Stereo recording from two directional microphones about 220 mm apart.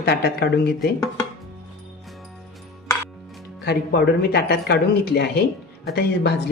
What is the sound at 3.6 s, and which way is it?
Speech, 50° left (ahead or behind).